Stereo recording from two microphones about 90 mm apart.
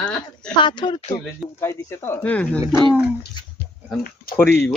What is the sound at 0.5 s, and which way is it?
Speech, 60° left (ahead or behind).